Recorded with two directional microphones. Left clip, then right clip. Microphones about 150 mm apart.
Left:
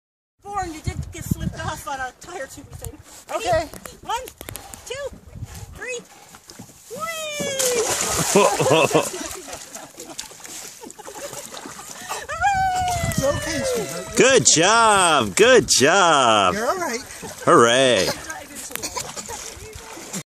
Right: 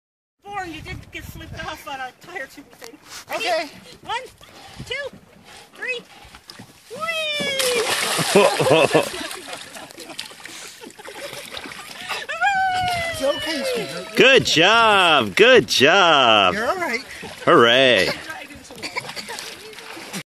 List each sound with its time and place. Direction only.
0.5 s a sound: 5° right (ahead or behind)
1.6 s speech: centre (ahead or behind)
4.8 s speech: 5° right (ahead or behind)
7.1 s cat: 5° right (ahead or behind)
7.8 s splash: 25° left (ahead or behind)
8.3 s speech: 30° right (ahead or behind)
11.1 s a sound: centre (ahead or behind)
11.9 s wail: 25° right (ahead or behind)
12.7 s a sound: 5° right (ahead or behind)
13.5 s speech: 5° left (ahead or behind)
17.2 s speech: 5° right (ahead or behind)
18.8 s a sound: 5° left (ahead or behind)